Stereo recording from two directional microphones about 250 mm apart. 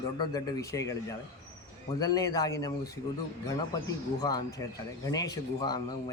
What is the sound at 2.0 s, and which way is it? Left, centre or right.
Speech, centre.